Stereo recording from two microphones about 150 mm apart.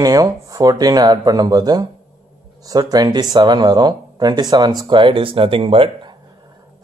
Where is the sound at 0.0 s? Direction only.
25° right (ahead or behind).